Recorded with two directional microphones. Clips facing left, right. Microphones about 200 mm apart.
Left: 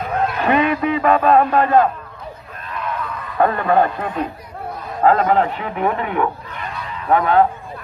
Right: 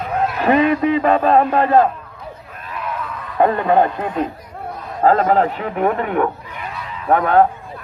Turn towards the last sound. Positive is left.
turn(degrees=-50)  # may be behind; listen again after turning